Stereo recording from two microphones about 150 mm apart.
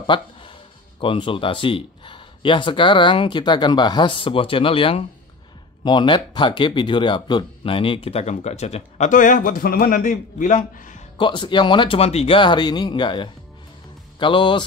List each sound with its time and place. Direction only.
0.0 s music: 35° left (ahead or behind)
1.0 s speech: 35° left (ahead or behind); by 11.0 s 60° left (ahead or behind)
11.1 s speech: 30° left (ahead or behind)